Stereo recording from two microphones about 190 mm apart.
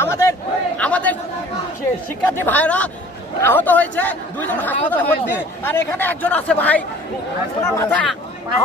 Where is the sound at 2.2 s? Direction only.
10° left (ahead or behind).